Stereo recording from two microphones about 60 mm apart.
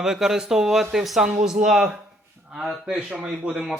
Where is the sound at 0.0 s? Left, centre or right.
Centre.